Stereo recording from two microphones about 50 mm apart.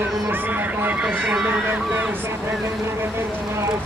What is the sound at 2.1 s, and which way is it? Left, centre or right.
Vehicle, right.